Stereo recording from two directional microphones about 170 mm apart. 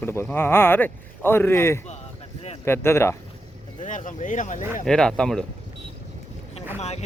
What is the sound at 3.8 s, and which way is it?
Speech, 50° left (ahead or behind).